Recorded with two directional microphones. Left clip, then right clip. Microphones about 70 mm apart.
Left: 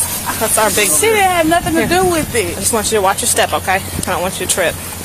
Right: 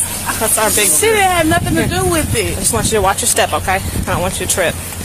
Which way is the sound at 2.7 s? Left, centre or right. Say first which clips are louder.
Even; centre.